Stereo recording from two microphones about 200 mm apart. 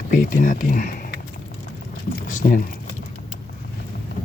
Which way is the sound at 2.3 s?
40° left (ahead or behind).